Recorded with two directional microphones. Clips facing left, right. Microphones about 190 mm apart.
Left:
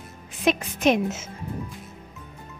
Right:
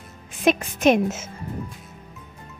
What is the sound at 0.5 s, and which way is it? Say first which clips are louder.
Speech: right 3 dB; 50° right (ahead or behind).